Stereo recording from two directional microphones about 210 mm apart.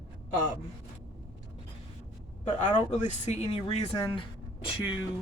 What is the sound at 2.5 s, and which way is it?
Speech, 20° left (ahead or behind).